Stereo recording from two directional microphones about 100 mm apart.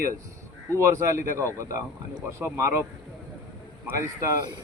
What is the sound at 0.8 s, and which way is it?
Speech, 30° right (ahead or behind).